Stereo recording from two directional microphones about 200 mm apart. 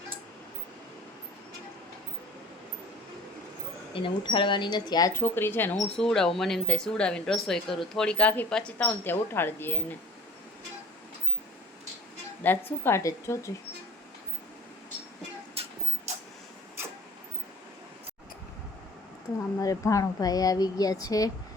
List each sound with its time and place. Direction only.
3.9 s speech: 25° left (ahead or behind); by 9.8 s 10° left (ahead or behind)
12.4 s speech: 10° left (ahead or behind)
15.6 s vehicle: 30° right (ahead or behind)
19.4 s speech: 15° left (ahead or behind)